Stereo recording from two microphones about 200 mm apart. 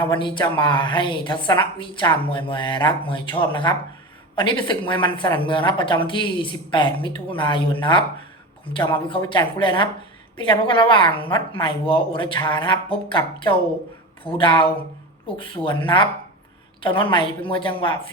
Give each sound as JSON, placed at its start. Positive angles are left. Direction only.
{"t": 0.0, "sound": "a woman's voice", "side_deg": 25}